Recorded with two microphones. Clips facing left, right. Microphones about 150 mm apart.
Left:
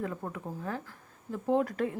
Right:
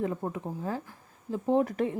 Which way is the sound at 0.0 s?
25° right (ahead or behind).